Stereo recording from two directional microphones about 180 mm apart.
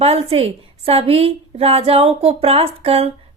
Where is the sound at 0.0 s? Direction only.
35° right (ahead or behind).